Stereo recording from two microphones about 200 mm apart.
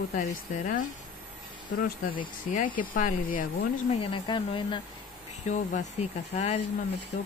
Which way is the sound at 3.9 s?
25° left (ahead or behind).